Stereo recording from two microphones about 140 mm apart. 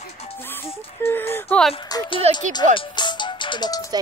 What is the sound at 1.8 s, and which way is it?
Speech, 30° left (ahead or behind).